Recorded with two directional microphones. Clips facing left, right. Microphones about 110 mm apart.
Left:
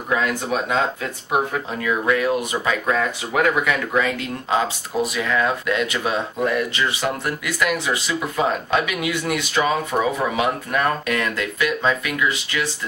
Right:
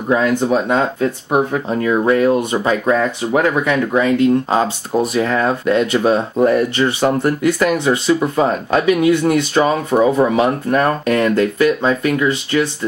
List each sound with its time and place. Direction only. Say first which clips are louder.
0.1 s speech: right 7 dB; 30° right (ahead or behind)